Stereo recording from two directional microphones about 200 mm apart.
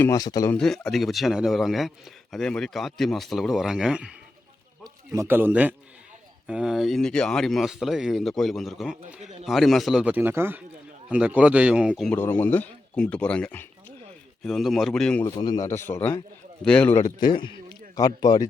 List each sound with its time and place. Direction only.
0.0 s a man's voice: 15° left (ahead or behind)
0.5 s a man's voice: centre (ahead or behind)
4.8 s a man's voice: 15° right (ahead or behind)
12.1 s a man's voice: 10° left (ahead or behind)
15.4 s a man's voice: 20° left (ahead or behind)
17.0 s a man's voice: 20° left (ahead or behind)